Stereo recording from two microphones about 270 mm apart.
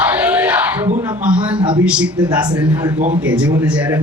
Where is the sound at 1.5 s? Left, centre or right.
Centre.